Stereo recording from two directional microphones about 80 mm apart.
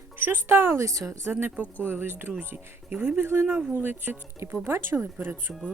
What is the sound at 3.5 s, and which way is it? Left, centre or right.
Speech, centre.